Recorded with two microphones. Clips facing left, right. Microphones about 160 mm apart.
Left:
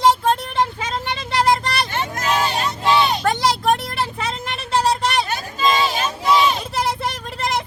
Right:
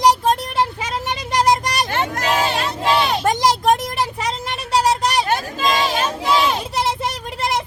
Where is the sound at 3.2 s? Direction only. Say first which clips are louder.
Right 1 dB; 15° right (ahead or behind).